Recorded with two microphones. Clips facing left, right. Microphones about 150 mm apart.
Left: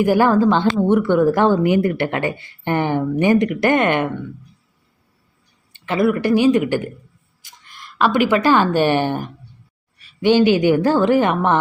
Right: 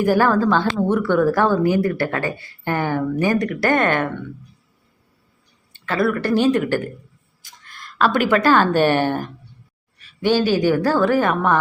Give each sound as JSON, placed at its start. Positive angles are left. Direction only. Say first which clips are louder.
{"t": 0.0, "sound": "speech", "louder": "left 2 dB", "side_deg": 15}
{"t": 5.7, "sound": "speech", "louder": "left 2 dB", "side_deg": 15}
{"t": 7.4, "sound": "a sound", "louder": "even", "side_deg": 15}
{"t": 8.3, "sound": "speech", "louder": "even", "side_deg": 15}